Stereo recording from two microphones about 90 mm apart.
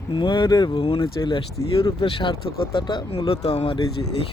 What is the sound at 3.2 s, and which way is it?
Speech, 90° left.